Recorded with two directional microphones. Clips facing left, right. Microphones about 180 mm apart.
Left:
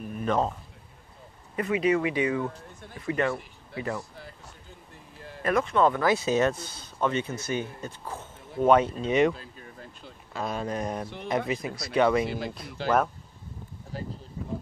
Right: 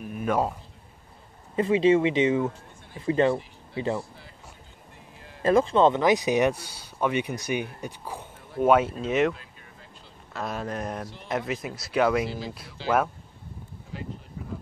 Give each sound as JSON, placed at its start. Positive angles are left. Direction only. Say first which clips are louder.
{"t": 0.0, "sound": "a sound", "louder": "right 1 dB", "side_deg": -5}
{"t": 1.6, "sound": "speech", "louder": "right 5 dB", "side_deg": -25}
{"t": 5.4, "sound": "speech", "louder": "right 4 dB", "side_deg": -30}
{"t": 9.3, "sound": "a sound", "louder": "left 2 dB", "side_deg": 35}
{"t": 10.3, "sound": "speech", "louder": "left 1 dB", "side_deg": 0}
{"t": 12.3, "sound": "speech", "louder": "left 2 dB", "side_deg": 55}
{"t": 12.8, "sound": "speech", "louder": "even", "side_deg": -5}
{"t": 13.9, "sound": "speech", "louder": "left 1 dB", "side_deg": 40}